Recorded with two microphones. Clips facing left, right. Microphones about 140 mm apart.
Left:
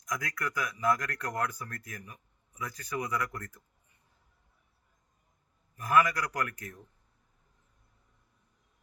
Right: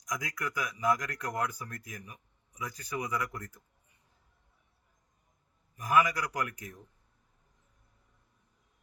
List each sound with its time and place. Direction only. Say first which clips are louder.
0.0 s speech: left 1 dB; 15° right (ahead or behind)
5.7 s speech: left 1 dB; 15° right (ahead or behind)